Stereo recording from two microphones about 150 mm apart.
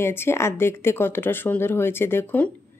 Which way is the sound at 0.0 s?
15° left (ahead or behind).